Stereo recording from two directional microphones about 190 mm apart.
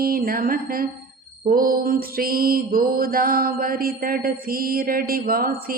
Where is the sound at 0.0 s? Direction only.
50° right (ahead or behind).